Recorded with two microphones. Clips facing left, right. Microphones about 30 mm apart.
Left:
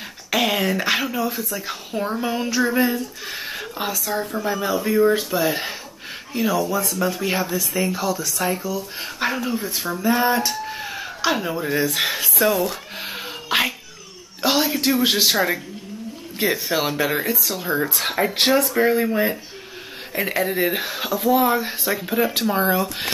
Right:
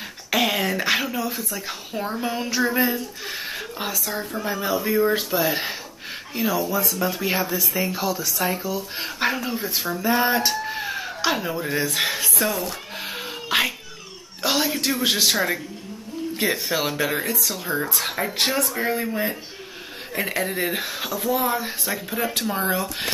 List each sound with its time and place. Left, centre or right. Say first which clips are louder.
0.3 s speech: left 1 dB; centre
10.6 s a sound: right 1 dB; centre
14.4 s speech: left 3 dB; centre
18.0 s speech: left 5 dB; centre
18.8 s speech: left 6 dB; centre